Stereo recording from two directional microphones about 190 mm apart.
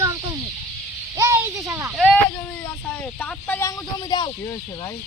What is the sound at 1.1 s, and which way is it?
Speech, 15° right (ahead or behind).